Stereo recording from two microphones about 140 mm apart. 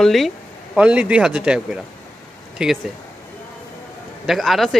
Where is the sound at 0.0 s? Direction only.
Centre (ahead or behind).